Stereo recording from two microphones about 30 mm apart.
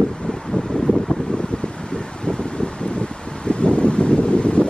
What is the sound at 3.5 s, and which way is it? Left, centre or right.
Wind, left.